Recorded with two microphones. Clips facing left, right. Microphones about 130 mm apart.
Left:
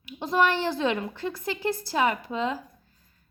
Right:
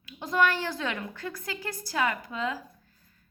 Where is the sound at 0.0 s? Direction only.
25° left (ahead or behind).